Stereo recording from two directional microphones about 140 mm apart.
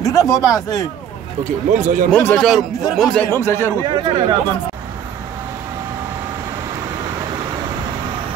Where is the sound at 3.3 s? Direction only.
20° left (ahead or behind).